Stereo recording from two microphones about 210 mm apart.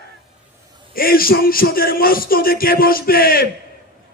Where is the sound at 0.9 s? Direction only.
45° left (ahead or behind).